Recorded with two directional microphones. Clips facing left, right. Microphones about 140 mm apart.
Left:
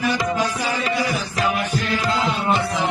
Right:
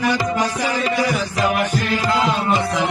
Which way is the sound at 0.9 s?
90° right.